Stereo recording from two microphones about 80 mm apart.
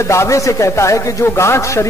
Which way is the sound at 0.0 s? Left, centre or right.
Left.